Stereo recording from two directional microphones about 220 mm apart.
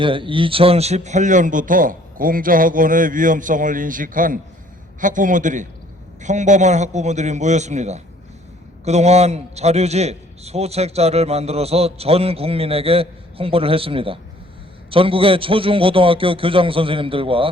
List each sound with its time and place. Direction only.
0.0 s a man's voice: 25° right (ahead or behind)